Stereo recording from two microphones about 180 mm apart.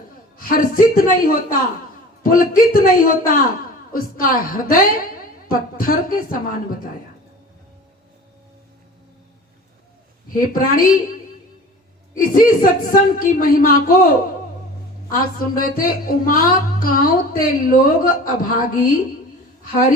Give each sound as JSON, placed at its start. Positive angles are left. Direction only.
{"t": 0.3, "sound": "speech", "side_deg": 50}
{"t": 10.3, "sound": "speech", "side_deg": 50}
{"t": 12.1, "sound": "speech", "side_deg": 50}
{"t": 15.1, "sound": "speech", "side_deg": 50}